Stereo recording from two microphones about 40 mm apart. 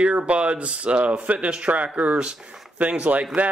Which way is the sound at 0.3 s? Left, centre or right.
Right.